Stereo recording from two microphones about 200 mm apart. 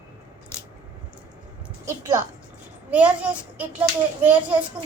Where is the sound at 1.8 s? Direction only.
15° right (ahead or behind).